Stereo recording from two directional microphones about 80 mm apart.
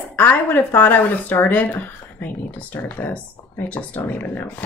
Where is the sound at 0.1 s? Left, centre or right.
Left.